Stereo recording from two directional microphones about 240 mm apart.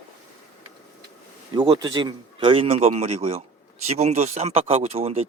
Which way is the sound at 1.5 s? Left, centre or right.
Right.